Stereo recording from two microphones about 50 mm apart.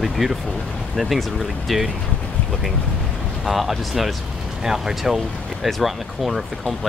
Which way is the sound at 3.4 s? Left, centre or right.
Centre.